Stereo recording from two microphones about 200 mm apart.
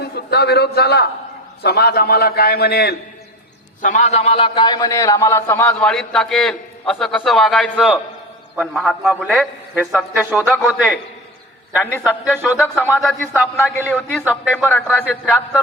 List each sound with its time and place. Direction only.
0.0 s a man's voice: 55° left (ahead or behind)
3.8 s a man's voice: 40° left (ahead or behind); by 10.9 s 5° right (ahead or behind)
11.8 s a man's voice: 10° left (ahead or behind)
12.0 s a man's voice: 5° right (ahead or behind)